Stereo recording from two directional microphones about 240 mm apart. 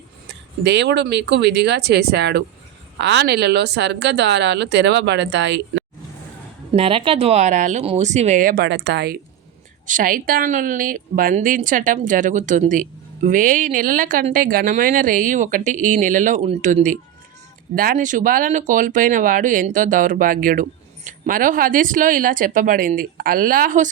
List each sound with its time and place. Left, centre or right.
0.6 s a woman's voice: right
6.7 s speech: right
9.8 s a woman's voice: right